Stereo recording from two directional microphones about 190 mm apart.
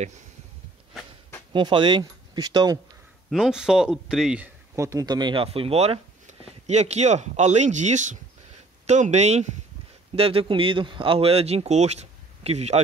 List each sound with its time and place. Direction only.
1.5 s speech: 25° right (ahead or behind)
3.3 s speech: centre (ahead or behind)
4.7 s speech: 15° right (ahead or behind); by 12.8 s 35° right (ahead or behind)